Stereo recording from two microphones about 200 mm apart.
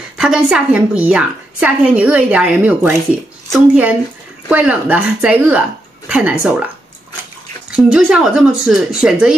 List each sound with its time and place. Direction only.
0.2 s a woman's voice: 5° right (ahead or behind)
7.7 s speech: 5° right (ahead or behind)